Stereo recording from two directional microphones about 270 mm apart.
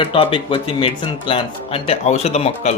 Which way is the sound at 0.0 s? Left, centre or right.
Centre.